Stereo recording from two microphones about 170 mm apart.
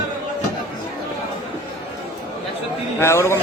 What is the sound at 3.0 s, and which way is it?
Speech, 15° left (ahead or behind).